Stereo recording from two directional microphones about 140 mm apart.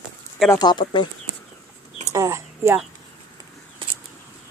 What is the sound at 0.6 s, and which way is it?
Speech, 30° left (ahead or behind).